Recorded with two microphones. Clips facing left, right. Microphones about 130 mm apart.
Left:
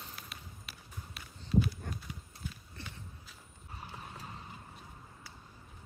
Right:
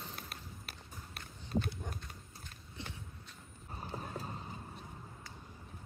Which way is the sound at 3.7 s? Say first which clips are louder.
Right 5 dB; 35° right (ahead or behind).